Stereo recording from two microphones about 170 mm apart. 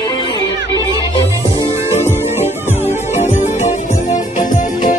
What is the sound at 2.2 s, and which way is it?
Music, 15° right (ahead or behind).